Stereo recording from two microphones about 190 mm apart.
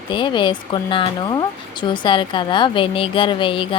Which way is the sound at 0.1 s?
25° left (ahead or behind).